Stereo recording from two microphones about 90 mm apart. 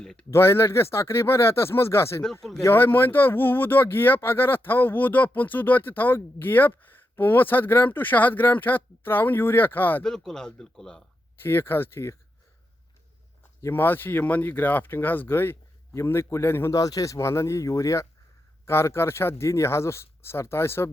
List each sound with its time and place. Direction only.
0.0 s speech: 5° left (ahead or behind)
0.3 s speech: 30° left (ahead or behind)
2.4 s speech: 5° left (ahead or behind)
2.6 s speech: 25° left (ahead or behind)
10.0 s speech: 5° left (ahead or behind)
11.4 s speech: 25° left (ahead or behind)
13.6 s speech: 25° left (ahead or behind)
16.7 s speech: 40° left (ahead or behind)